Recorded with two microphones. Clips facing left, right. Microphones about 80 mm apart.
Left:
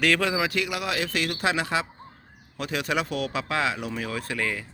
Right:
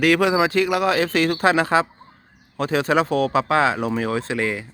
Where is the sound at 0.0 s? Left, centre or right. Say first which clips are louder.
Right 7 dB; centre; by 4.2 s right.